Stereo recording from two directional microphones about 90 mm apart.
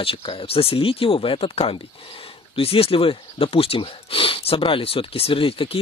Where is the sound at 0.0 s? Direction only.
90° left.